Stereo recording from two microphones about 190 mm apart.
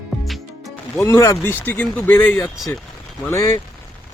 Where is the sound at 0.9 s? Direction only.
15° left (ahead or behind).